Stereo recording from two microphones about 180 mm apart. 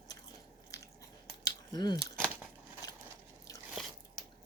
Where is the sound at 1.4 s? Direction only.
20° left (ahead or behind).